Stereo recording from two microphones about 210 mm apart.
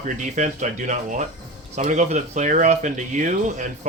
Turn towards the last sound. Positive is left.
turn(degrees=-35)  # may be behind; listen again after turning